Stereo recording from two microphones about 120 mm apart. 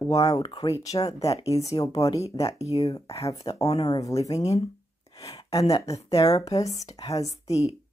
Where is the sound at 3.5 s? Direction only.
40° left (ahead or behind).